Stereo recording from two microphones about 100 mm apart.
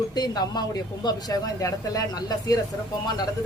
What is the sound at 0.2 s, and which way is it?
Speech, 45° left (ahead or behind).